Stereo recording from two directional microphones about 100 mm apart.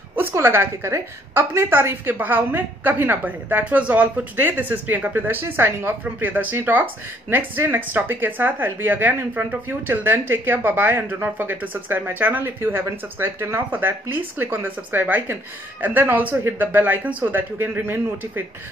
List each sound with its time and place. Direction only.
0.1 s a woman's voice: 25° right (ahead or behind)